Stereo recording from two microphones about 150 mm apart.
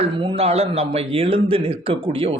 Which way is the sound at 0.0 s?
40° right (ahead or behind).